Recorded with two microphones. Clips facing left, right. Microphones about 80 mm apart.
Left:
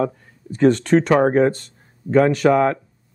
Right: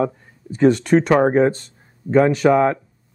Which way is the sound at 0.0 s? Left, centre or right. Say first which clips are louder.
Right 1 dB; centre.